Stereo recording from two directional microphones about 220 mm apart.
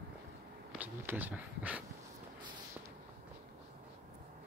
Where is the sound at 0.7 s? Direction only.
10° right (ahead or behind).